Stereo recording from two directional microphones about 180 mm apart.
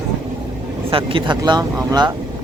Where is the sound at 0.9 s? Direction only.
30° right (ahead or behind).